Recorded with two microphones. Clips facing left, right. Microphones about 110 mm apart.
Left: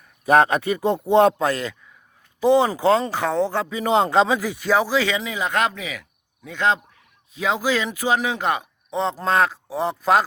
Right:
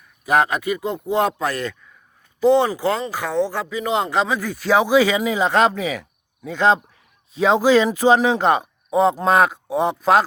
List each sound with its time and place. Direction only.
0.3 s speech: 30° left (ahead or behind); by 2.6 s 15° left (ahead or behind)
2.6 s speech: 25° left (ahead or behind)
4.4 s a man's voice: centre (ahead or behind)
4.9 s a man's voice: 25° right (ahead or behind)
8.9 s speech: 15° right (ahead or behind)
9.7 s a man's voice: 5° right (ahead or behind)